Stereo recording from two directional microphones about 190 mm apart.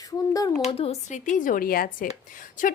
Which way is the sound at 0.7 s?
30° left (ahead or behind).